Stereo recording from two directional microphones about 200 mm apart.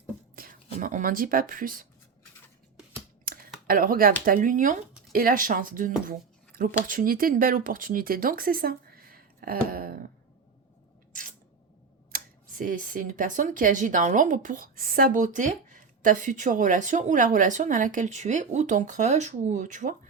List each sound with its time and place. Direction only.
0.3 s speech: 45° right (ahead or behind)
3.7 s speech: 45° right (ahead or behind)
11.1 s squish: 40° right (ahead or behind)
12.1 s speech: 40° right (ahead or behind)